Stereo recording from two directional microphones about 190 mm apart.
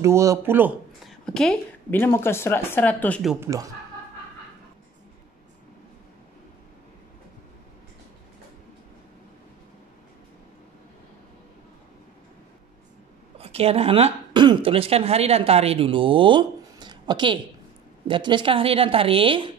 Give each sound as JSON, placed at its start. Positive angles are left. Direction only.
{"t": 0.0, "sound": "speech", "side_deg": -15}
{"t": 1.0, "sound": "a woman's voice", "side_deg": 5}
{"t": 3.3, "sound": "speech", "side_deg": -15}
{"t": 13.4, "sound": "a woman's voice", "side_deg": -30}